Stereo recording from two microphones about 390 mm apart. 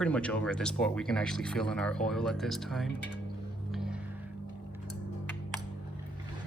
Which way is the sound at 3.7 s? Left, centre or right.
Centre.